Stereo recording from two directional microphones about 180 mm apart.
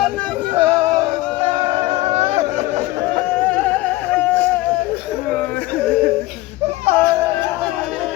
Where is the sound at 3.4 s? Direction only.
10° left (ahead or behind).